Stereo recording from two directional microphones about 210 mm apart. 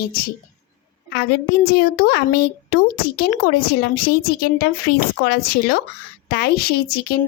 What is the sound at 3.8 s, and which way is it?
A woman's voice, 45° left (ahead or behind).